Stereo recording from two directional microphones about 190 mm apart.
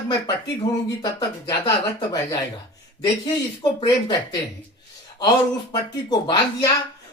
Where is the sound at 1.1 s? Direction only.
20° left (ahead or behind).